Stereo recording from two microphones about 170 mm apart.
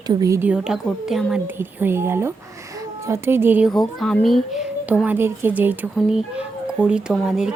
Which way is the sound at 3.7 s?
5° left (ahead or behind).